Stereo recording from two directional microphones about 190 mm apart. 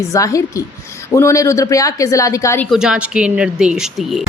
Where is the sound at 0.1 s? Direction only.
15° left (ahead or behind).